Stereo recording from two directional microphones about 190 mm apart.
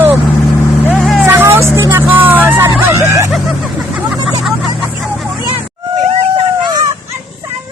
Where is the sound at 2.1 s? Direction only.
10° right (ahead or behind).